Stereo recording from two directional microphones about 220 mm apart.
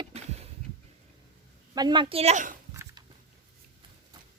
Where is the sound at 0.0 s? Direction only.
30° right (ahead or behind).